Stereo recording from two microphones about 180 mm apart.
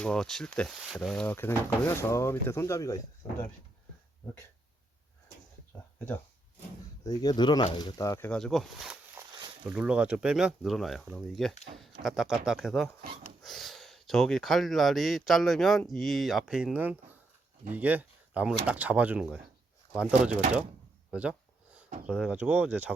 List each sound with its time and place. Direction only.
0.0 s speech: 5° left (ahead or behind)
7.0 s speech: 20° left (ahead or behind); by 20.4 s 5° right (ahead or behind)
21.1 s a sound: 5° right (ahead or behind)
22.0 s speech: 5° right (ahead or behind)